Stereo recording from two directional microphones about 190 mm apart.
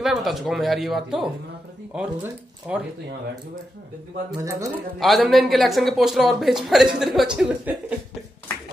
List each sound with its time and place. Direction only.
0.0 s speech: centre (ahead or behind)
4.4 s speech: 15° right (ahead or behind)
5.0 s speech: centre (ahead or behind)